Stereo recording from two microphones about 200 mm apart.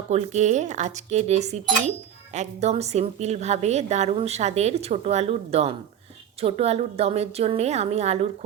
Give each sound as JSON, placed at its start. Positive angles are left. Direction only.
{"t": 0.1, "sound": "a woman's voice", "side_deg": -35}